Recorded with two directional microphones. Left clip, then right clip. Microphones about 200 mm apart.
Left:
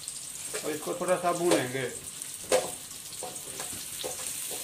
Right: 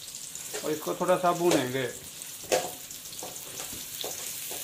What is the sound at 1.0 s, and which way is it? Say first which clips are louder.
Speech: right 3 dB; 35° right (ahead or behind).